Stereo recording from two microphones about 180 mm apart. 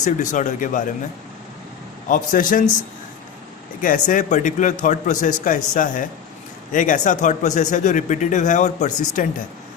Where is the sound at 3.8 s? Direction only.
45° left (ahead or behind).